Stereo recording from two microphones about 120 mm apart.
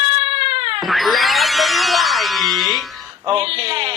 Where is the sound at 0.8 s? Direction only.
Centre (ahead or behind).